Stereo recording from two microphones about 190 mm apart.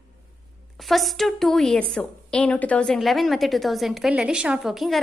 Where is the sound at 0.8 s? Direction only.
Centre (ahead or behind).